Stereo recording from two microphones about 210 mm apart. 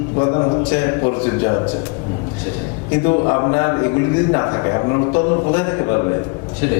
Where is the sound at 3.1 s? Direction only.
25° left (ahead or behind).